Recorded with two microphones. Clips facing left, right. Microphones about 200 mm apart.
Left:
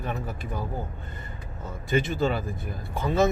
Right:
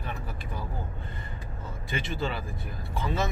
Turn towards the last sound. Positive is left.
turn(degrees=45)  # may be behind; listen again after turning